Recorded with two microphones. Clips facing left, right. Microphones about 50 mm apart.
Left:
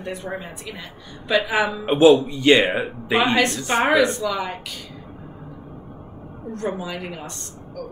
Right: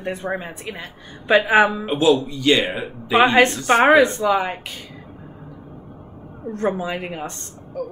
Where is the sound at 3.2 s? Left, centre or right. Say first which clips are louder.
Right 6 dB; right.